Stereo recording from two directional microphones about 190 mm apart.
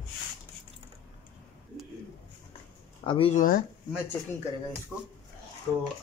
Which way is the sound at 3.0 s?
30° left (ahead or behind).